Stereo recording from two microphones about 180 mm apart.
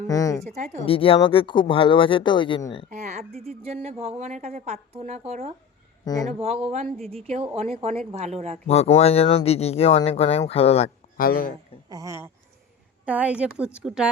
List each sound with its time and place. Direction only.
0.1 s speech: 20° left (ahead or behind)
0.4 s speech: 40° right (ahead or behind)
0.9 s speech: 30° left (ahead or behind)
2.9 s speech: 40° right (ahead or behind)
6.1 s speech: 20° left (ahead or behind)
6.4 s speech: 35° right (ahead or behind)
8.6 s speech: 35° left (ahead or behind)
11.2 s speech: 50° left (ahead or behind)
11.9 s a woman's voice: 20° right (ahead or behind)